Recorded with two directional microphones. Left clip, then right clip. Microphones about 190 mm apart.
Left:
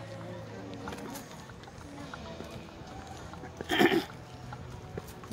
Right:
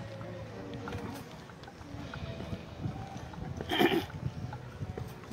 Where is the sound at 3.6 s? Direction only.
15° left (ahead or behind).